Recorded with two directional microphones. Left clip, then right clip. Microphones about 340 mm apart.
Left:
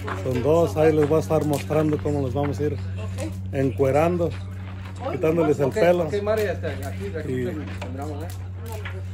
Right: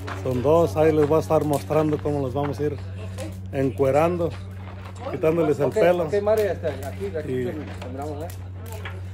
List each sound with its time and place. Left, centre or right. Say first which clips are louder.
0.0 s a man's voice: even; centre
6.1 s speech: right 3 dB; centre
7.2 s a man's voice: left 1 dB; centre